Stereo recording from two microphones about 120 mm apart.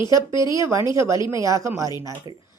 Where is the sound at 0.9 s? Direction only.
25° right (ahead or behind).